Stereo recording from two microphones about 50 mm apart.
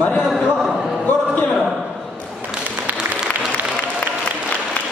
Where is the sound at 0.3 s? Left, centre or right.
Centre.